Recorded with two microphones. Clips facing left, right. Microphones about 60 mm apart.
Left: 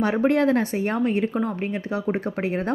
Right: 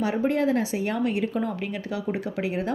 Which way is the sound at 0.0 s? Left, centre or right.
Left.